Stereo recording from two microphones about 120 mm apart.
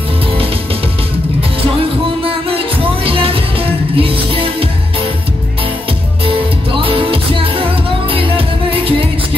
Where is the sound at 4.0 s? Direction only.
50° right (ahead or behind).